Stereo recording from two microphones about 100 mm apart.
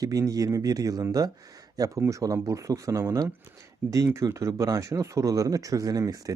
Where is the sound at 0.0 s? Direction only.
35° right (ahead or behind).